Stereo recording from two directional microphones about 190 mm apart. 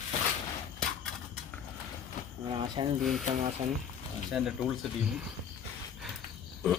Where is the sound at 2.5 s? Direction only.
25° right (ahead or behind).